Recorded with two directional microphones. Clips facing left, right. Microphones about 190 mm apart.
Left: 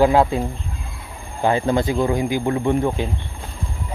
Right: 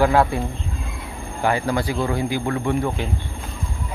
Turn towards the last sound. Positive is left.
turn(degrees=20)  # may be behind; listen again after turning